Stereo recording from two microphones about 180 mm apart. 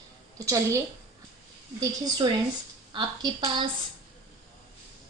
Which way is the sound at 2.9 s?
25° right (ahead or behind).